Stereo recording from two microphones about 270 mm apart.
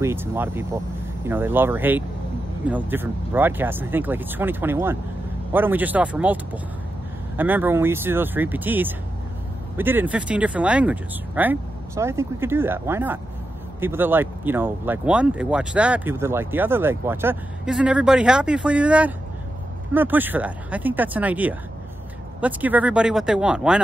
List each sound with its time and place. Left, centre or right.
0.0 s speech: centre